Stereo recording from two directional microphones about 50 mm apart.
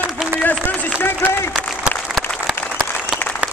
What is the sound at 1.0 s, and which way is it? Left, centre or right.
Speech, left.